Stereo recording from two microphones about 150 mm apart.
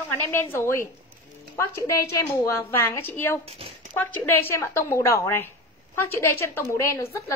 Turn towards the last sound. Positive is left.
turn(degrees=20)  # may be behind; listen again after turning